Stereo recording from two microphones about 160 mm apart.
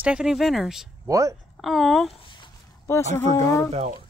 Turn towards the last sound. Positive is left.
turn(degrees=-40)  # may be behind; listen again after turning